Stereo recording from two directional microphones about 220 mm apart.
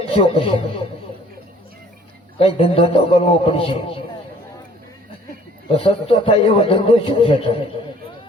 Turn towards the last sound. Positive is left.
turn(degrees=25)  # may be behind; listen again after turning